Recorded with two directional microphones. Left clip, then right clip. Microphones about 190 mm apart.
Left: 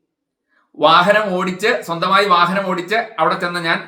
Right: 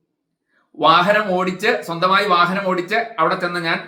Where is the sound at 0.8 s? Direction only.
5° left (ahead or behind).